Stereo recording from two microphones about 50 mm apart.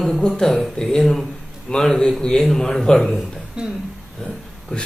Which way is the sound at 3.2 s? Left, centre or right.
Centre.